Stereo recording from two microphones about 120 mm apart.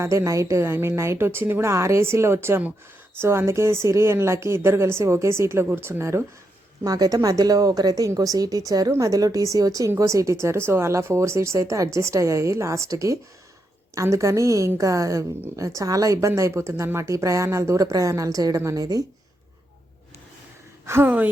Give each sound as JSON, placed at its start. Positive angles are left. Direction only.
{"t": 0.0, "sound": "a woman's voice", "side_deg": -25}
{"t": 20.8, "sound": "speech", "side_deg": -20}